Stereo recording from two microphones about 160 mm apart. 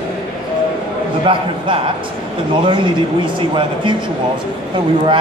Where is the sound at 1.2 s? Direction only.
35° right (ahead or behind).